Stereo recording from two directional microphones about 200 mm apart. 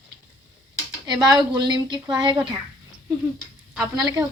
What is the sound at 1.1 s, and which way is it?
A woman's voice, 20° right (ahead or behind).